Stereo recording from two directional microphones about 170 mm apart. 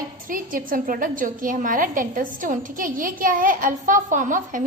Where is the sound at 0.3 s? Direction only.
50° right (ahead or behind).